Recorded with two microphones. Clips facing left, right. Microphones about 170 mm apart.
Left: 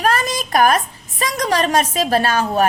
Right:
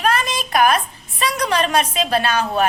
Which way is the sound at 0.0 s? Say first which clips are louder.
Left 1 dB; 45° left (ahead or behind).